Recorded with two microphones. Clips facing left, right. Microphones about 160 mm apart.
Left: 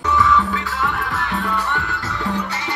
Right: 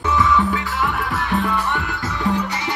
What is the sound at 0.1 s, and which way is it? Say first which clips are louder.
Music: even; 20° right (ahead or behind).